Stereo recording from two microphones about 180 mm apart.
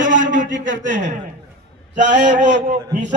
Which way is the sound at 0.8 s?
45° right (ahead or behind).